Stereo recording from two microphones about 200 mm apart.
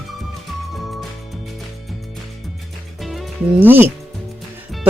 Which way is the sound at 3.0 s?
Centre (ahead or behind).